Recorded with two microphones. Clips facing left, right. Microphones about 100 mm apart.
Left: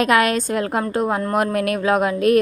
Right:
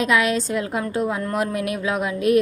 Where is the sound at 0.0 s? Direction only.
55° left (ahead or behind).